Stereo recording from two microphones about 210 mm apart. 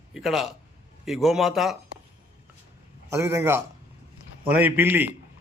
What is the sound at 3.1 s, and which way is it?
A man's voice, 10° right (ahead or behind).